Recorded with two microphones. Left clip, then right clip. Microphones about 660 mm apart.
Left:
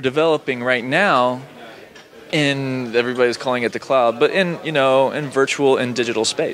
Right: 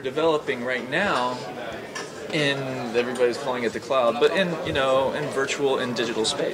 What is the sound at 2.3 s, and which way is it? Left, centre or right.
Speech, left.